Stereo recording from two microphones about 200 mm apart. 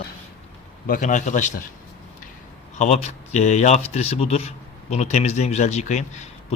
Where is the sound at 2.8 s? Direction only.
35° left (ahead or behind).